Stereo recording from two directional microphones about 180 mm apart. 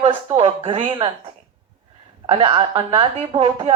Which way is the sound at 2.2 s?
30° right (ahead or behind).